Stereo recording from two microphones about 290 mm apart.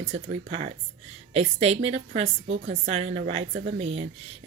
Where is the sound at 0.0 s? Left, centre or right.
Right.